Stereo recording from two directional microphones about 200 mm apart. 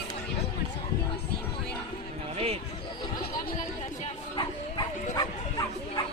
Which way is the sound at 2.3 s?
30° right (ahead or behind).